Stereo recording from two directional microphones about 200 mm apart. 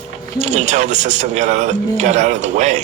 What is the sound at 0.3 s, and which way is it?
Speech, 35° right (ahead or behind).